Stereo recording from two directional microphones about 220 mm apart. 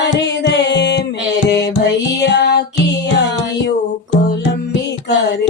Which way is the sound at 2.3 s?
50° left (ahead or behind).